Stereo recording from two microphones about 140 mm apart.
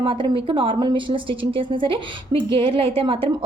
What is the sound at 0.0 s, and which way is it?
A woman's voice, 40° right (ahead or behind).